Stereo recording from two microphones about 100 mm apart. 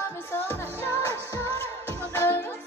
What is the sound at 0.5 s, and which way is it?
Music, 25° left (ahead or behind).